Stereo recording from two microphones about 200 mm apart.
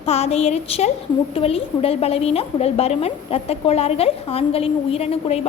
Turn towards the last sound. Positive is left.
turn(degrees=30)  # may be behind; listen again after turning